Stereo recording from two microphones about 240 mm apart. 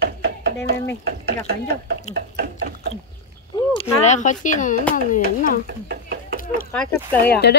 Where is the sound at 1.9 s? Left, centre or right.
Right.